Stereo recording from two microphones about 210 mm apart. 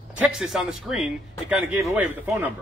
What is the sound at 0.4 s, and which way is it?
A man's voice, centre (ahead or behind).